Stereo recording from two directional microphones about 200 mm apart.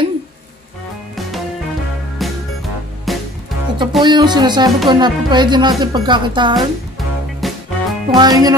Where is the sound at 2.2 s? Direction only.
Centre (ahead or behind).